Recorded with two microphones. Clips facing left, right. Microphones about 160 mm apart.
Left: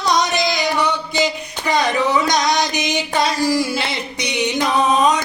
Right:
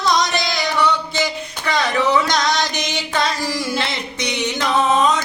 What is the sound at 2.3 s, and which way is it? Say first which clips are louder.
Music: left 2 dB; 15° left (ahead or behind).